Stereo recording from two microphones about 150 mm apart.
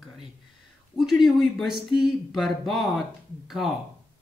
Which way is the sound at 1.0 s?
Centre (ahead or behind).